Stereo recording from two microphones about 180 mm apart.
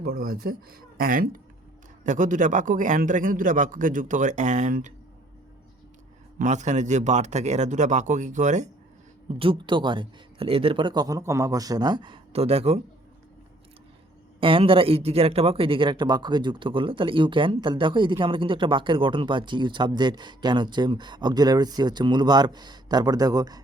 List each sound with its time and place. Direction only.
0.0 s a man's voice: 55° right (ahead or behind)
6.4 s speech: 40° right (ahead or behind)
9.4 s speech: 25° right (ahead or behind)
14.4 s speech: 30° right (ahead or behind)